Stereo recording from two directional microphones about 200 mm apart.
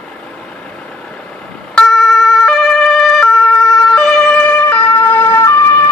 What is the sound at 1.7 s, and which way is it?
Emergency vehicle, centre (ahead or behind).